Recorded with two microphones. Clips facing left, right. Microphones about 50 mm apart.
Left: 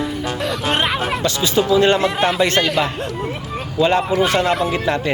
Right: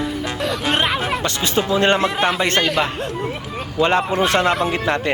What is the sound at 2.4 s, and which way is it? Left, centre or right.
Speech, right.